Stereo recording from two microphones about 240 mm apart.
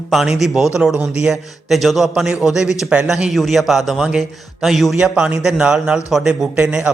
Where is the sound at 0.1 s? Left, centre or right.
Centre.